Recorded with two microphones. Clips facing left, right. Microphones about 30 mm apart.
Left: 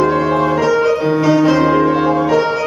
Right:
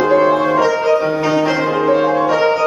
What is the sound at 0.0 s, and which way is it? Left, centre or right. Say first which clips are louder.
Music: right 1 dB; centre.